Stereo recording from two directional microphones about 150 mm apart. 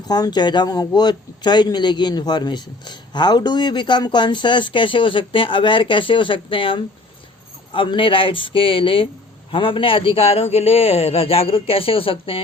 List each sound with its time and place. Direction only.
0.1 s a man's voice: 30° left (ahead or behind)